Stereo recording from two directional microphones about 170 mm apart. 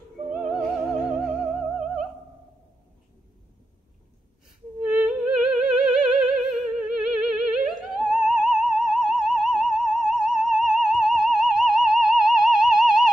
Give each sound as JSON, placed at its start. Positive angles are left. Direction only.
{"t": 0.3, "sound": "music", "side_deg": 0}
{"t": 4.8, "sound": "music", "side_deg": 0}